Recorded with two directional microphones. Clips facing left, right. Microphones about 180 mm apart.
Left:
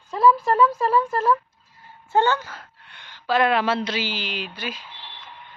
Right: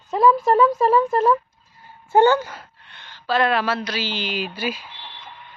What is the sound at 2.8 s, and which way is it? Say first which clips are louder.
Speech: even; 10° left (ahead or behind).